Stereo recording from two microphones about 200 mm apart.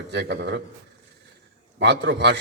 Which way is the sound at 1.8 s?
60° right (ahead or behind).